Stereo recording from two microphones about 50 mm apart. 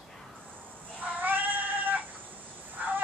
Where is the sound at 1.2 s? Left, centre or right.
Right.